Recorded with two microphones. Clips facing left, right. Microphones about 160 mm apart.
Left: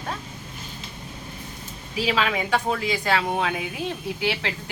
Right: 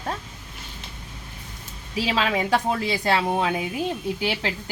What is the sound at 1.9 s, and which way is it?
Speech, 30° right (ahead or behind).